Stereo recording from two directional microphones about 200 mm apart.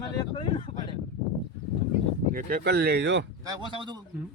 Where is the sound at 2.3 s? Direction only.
50° right (ahead or behind).